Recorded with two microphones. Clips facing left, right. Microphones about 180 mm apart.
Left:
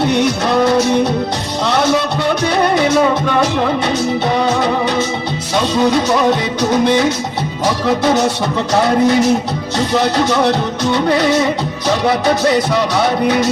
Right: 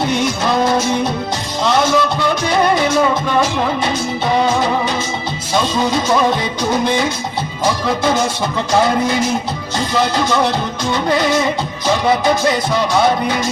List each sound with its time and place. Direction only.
0.0 s music: 65° left (ahead or behind)
8.7 s music: 65° left (ahead or behind)